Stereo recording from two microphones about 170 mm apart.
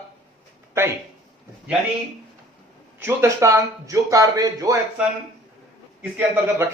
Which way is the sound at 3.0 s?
15° right (ahead or behind).